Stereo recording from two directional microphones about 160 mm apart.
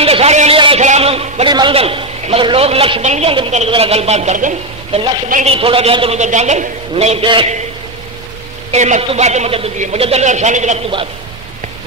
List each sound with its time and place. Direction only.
0.0 s a sound: 40° right (ahead or behind)
1.5 s a man's voice: 30° right (ahead or behind); by 5.0 s 50° right (ahead or behind)
5.5 s a man's voice: 35° right (ahead or behind)
8.7 s a man's voice: 45° right (ahead or behind)